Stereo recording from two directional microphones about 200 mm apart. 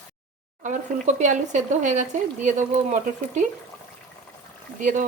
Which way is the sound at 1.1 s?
35° right (ahead or behind).